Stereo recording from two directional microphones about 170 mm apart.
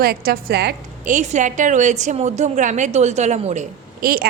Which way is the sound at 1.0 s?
45° right (ahead or behind).